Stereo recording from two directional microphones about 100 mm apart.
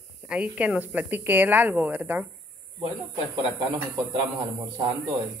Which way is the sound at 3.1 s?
60° right (ahead or behind).